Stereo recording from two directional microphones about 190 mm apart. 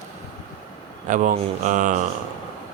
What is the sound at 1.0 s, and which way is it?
Speech, 40° right (ahead or behind).